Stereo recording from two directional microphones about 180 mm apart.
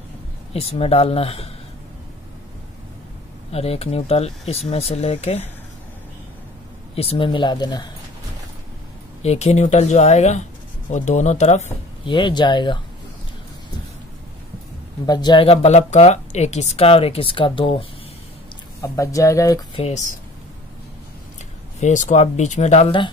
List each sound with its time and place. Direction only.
0.5 s speech: 35° left (ahead or behind)
3.5 s speech: 35° left (ahead or behind)
7.0 s speech: 30° left (ahead or behind)
9.2 s speech: 35° left (ahead or behind)
15.0 s speech: 25° left (ahead or behind)
15.4 s speech: 35° left (ahead or behind)
18.8 s speech: 15° left (ahead or behind)
19.7 s speech: 35° left (ahead or behind)
21.7 s speech: 40° left (ahead or behind)